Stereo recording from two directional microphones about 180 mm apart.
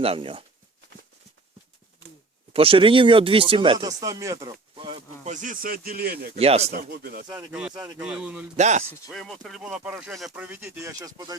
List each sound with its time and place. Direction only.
0.0 s speech: 30° right (ahead or behind)
2.5 s speech: 30° right (ahead or behind)
4.7 s a sound: 30° right (ahead or behind)
5.3 s speech: 45° right (ahead or behind)
6.3 s speech: 35° right (ahead or behind)
6.7 s speech: 65° right (ahead or behind)
7.7 s speech: 20° right (ahead or behind)
7.9 s a man's voice: 5° right (ahead or behind)
8.5 s speech: 40° right (ahead or behind)
9.0 s speech: centre (ahead or behind); by 11.3 s 20° right (ahead or behind)